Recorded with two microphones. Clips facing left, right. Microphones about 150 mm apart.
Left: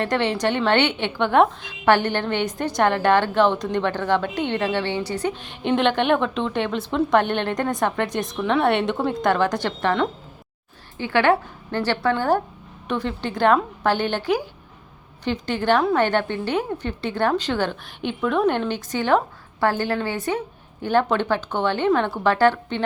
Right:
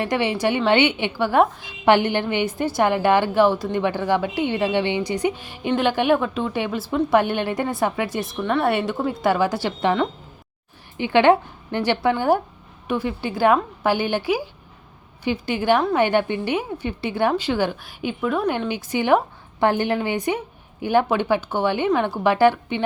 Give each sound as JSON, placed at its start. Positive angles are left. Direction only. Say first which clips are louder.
{"t": 0.0, "sound": "a woman's voice", "louder": "even", "side_deg": -10}
{"t": 10.9, "sound": "a woman's voice", "louder": "right 3 dB", "side_deg": -20}